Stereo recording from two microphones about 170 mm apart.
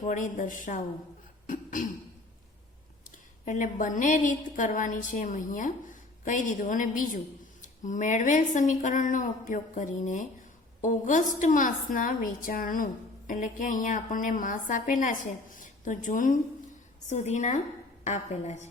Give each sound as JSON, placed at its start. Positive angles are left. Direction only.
{"t": 0.0, "sound": "a woman's voice", "side_deg": 45}
{"t": 1.5, "sound": "throat clearing", "side_deg": 50}
{"t": 3.4, "sound": "a woman's voice", "side_deg": 50}